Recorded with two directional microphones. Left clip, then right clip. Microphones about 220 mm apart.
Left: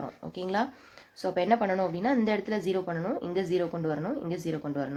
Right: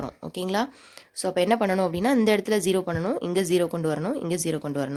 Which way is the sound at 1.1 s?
45° right (ahead or behind).